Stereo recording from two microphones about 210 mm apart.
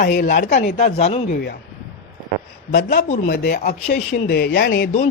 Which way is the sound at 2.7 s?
50° left (ahead or behind).